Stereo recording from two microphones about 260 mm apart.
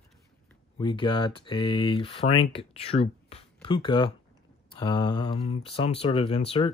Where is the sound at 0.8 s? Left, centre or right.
Centre.